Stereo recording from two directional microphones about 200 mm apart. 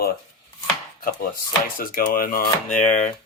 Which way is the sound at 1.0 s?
45° left (ahead or behind).